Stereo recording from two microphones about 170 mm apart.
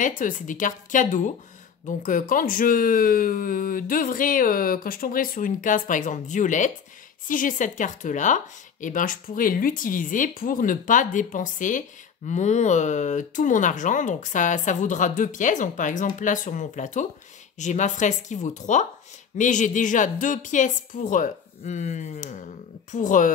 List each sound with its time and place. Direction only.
0.0 s speech: 50° left (ahead or behind)